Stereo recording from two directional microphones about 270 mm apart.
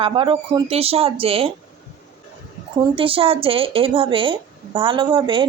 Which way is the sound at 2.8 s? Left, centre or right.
Centre.